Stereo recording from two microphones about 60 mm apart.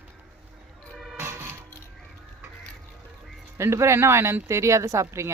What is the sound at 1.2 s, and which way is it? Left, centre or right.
Music, right.